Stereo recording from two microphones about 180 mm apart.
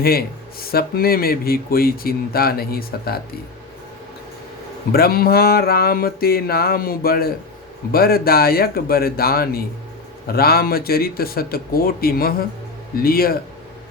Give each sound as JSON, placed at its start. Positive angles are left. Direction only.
{"t": 0.0, "sound": "speech", "side_deg": 60}
{"t": 4.9, "sound": "speech", "side_deg": 60}